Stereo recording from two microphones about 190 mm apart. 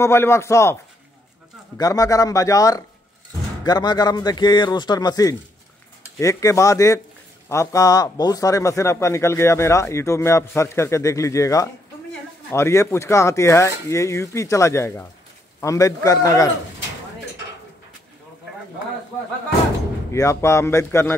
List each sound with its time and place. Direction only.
0.0 s speech: 15° left (ahead or behind)
1.8 s a man's voice: 20° left (ahead or behind)
20.1 s speech: 15° left (ahead or behind)